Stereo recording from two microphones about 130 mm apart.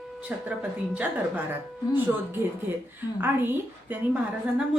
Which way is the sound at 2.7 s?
15° right (ahead or behind).